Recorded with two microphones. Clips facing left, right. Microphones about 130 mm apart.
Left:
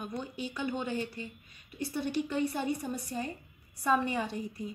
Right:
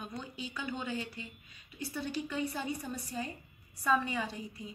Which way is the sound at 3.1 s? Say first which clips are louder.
Left 1 dB; 45° left (ahead or behind).